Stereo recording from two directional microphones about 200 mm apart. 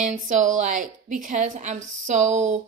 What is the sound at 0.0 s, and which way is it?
A woman's voice, 40° right (ahead or behind).